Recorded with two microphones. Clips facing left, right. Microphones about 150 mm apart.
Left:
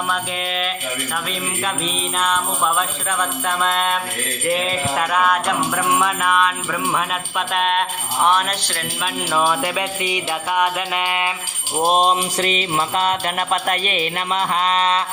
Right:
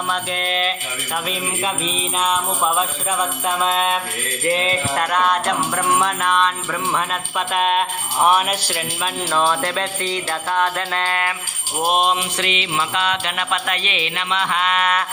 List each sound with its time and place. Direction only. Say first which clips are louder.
0.1 s jingle bell: right 1 dB; centre (ahead or behind)
2.1 s jingle bell: right 1 dB; 5° right (ahead or behind)
9.3 s music: even; 5° left (ahead or behind)
11.8 s mantra: left 2 dB; 35° left (ahead or behind)